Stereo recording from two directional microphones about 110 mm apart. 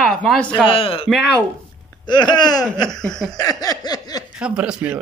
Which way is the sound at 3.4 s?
35° left (ahead or behind).